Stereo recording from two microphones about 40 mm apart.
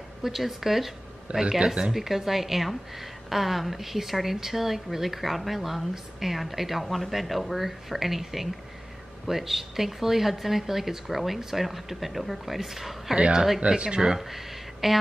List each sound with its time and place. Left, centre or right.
0.2 s a woman's voice: centre
13.1 s speech: right; by 15.0 s centre